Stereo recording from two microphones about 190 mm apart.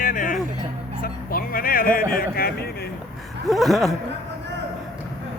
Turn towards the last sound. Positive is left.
turn(degrees=0)  # may be behind; listen again after turning